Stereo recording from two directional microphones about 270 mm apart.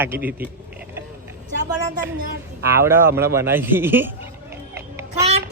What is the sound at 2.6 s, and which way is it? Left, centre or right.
A man's voice, centre.